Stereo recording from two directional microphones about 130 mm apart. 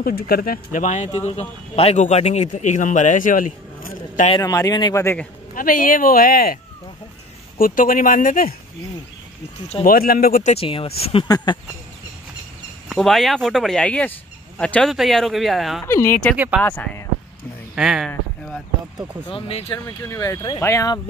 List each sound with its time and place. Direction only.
0.5 s speech: 85° left
4.4 s speech: 25° left (ahead or behind)
4.9 s speech: 15° left (ahead or behind)
5.5 s a man's voice: 90° left
9.8 s a man's voice: 90° left
10.5 s speech: 45° left (ahead or behind)
11.2 s speech: 30° left (ahead or behind)
12.9 s speech: centre (ahead or behind)
15.8 s speech: 20° left (ahead or behind)
17.7 s speech: 5° right (ahead or behind)
19.2 s speech: 45° left (ahead or behind)
20.0 s speech: 25° left (ahead or behind)